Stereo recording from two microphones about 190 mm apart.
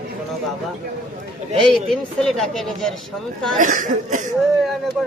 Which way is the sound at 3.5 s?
40° right (ahead or behind).